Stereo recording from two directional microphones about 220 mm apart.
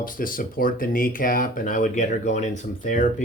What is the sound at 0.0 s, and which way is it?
Speech, 40° left (ahead or behind).